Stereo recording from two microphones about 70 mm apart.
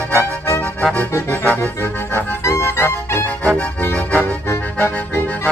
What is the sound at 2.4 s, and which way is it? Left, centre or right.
Music, left.